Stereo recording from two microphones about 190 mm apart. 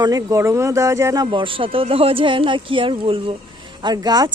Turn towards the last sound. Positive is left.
turn(degrees=-20)  # may be behind; listen again after turning